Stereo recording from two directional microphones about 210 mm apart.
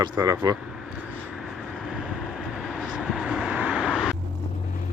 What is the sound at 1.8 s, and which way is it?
Vehicle, centre (ahead or behind).